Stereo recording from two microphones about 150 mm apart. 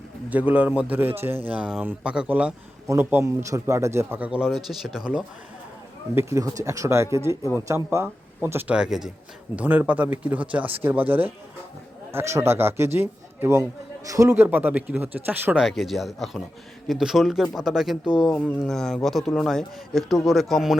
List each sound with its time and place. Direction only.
0.3 s speech: 10° right (ahead or behind)
6.1 s speech: 20° right (ahead or behind)
15.6 s a man's voice: centre (ahead or behind)